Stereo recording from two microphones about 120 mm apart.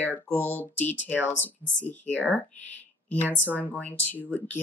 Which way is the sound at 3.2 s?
15° left (ahead or behind).